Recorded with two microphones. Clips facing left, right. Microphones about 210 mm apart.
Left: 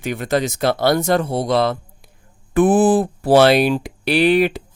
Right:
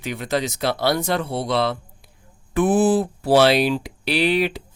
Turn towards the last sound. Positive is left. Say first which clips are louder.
# left 5 dB
turn(degrees=50)  # may be behind; listen again after turning